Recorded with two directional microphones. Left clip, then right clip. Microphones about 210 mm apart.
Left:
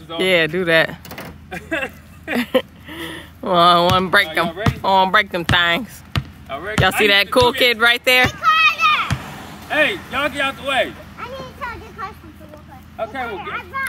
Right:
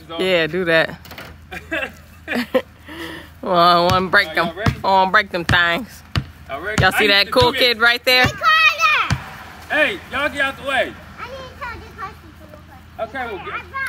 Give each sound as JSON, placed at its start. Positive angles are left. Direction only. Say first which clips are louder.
{"t": 0.1, "sound": "speech", "louder": "left 1 dB", "side_deg": 0}
{"t": 1.1, "sound": "a sound", "louder": "left 2 dB", "side_deg": 20}
{"t": 2.3, "sound": "speech", "louder": "left 1 dB", "side_deg": 0}
{"t": 8.3, "sound": "children playing", "louder": "even", "side_deg": -40}
{"t": 9.7, "sound": "a sound", "louder": "even", "side_deg": 0}
{"t": 12.9, "sound": "speech", "louder": "left 1 dB", "side_deg": 0}